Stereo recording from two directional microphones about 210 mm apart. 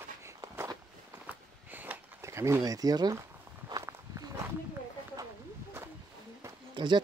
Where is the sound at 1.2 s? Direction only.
10° right (ahead or behind).